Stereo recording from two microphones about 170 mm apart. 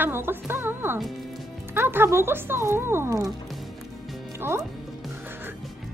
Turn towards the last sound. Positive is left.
turn(degrees=-15)  # may be behind; listen again after turning